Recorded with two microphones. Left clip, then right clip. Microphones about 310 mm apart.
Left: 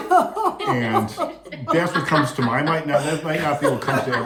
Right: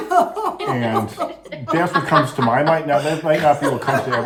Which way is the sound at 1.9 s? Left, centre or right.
Centre.